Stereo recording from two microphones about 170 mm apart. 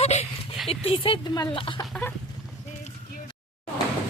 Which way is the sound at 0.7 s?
35° left (ahead or behind).